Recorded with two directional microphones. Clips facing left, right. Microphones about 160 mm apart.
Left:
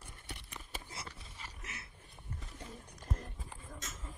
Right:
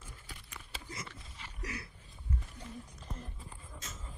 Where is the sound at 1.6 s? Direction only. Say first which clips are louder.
Right 12 dB; 25° left (ahead or behind).